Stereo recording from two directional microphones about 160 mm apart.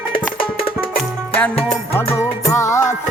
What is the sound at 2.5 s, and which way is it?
Music, 20° left (ahead or behind).